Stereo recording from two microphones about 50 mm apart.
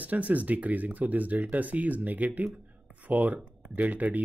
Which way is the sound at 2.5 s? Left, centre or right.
Right.